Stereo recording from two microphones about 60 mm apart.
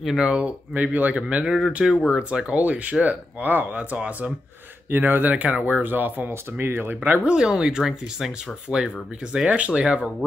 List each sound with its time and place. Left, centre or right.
0.0 s speech: centre
0.4 s speech: right
1.4 s speech: centre
2.1 s speech: centre
5.3 s speech: right
6.6 s speech: right
7.2 s speech: centre